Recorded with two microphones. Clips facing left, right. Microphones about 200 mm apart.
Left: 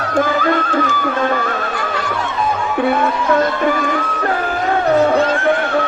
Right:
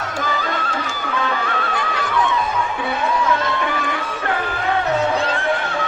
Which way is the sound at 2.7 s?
55° left (ahead or behind).